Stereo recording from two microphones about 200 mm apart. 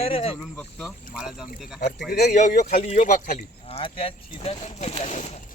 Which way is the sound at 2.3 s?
35° left (ahead or behind).